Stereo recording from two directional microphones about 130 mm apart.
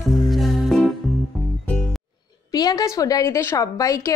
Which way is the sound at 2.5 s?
30° left (ahead or behind).